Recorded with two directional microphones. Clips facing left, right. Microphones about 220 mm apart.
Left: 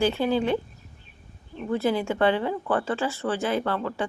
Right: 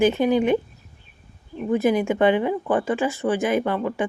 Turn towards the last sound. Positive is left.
turn(degrees=-15)  # may be behind; listen again after turning